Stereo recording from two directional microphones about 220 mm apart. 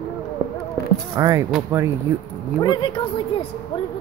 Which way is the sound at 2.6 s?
20° left (ahead or behind).